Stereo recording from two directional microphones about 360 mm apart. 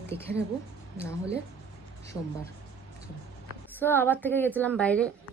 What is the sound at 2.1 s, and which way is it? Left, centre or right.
Speech, centre.